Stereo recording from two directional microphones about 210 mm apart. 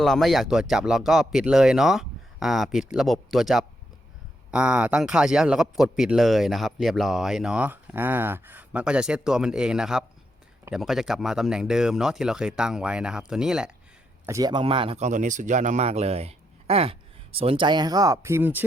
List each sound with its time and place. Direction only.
0.0 s speech: centre (ahead or behind)
14.3 s speech: 15° right (ahead or behind)